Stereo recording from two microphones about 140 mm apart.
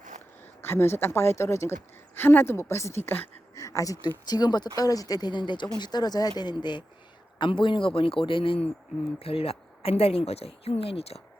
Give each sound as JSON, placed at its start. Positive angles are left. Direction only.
{"t": 0.6, "sound": "a woman's voice", "side_deg": 15}